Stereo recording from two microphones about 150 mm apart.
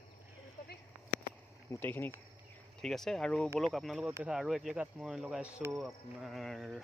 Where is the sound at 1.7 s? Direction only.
15° left (ahead or behind).